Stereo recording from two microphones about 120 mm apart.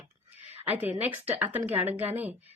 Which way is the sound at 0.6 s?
15° right (ahead or behind).